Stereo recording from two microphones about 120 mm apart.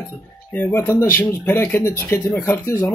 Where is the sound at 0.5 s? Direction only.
20° left (ahead or behind).